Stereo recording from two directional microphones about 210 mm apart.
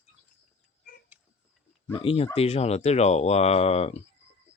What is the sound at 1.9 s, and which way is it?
Speech, 25° left (ahead or behind).